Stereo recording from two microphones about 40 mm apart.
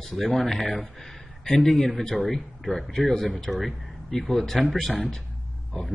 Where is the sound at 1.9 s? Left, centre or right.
Centre.